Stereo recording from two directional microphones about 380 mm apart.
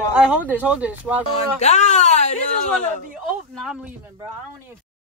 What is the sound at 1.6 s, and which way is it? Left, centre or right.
Speech, centre.